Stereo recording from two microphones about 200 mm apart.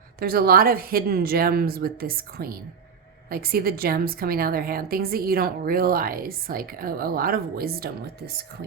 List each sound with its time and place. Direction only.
0.2 s a woman's voice: 50° right (ahead or behind)